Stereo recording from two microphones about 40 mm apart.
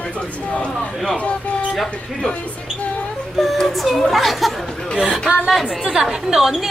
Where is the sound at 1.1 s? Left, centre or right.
Left.